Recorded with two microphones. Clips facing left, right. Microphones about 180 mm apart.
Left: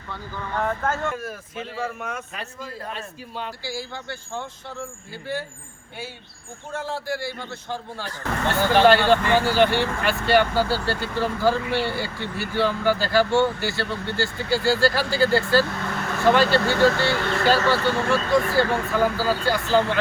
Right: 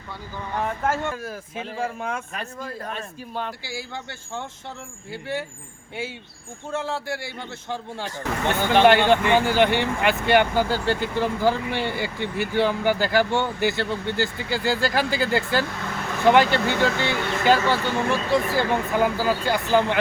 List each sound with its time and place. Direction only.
0.1 s a man's voice: 15° right (ahead or behind)
2.3 s speech: 50° right (ahead or behind)
6.7 s a man's voice: 25° right (ahead or behind)